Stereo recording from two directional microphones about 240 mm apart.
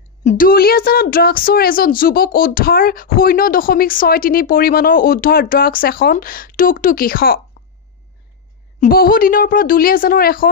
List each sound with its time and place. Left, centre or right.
0.2 s speech: left
8.8 s speech: left